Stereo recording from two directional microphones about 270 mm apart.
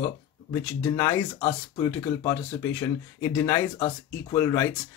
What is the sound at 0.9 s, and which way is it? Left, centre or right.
Speech, centre.